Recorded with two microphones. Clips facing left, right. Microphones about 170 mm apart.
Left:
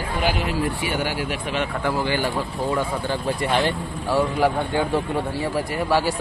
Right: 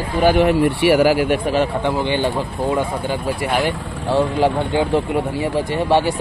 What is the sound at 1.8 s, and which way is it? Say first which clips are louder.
Speech: right 4 dB; 20° right (ahead or behind).